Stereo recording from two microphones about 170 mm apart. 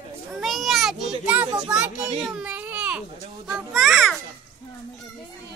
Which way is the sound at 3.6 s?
Centre (ahead or behind).